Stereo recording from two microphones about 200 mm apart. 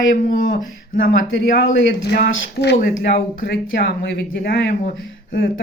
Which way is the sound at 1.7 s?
60° left (ahead or behind).